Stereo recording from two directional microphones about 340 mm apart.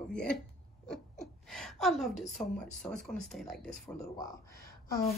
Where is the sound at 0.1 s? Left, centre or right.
Centre.